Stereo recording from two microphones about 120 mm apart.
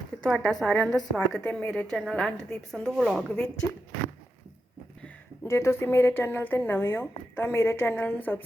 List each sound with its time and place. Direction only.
0.2 s a woman's voice: 5° left (ahead or behind)
5.5 s speech: 20° left (ahead or behind)